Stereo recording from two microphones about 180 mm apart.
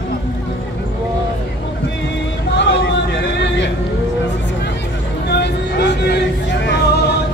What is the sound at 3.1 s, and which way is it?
Vehicle, 75° left (ahead or behind).